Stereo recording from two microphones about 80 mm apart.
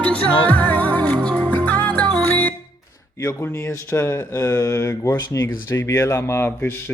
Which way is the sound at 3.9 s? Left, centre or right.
Left.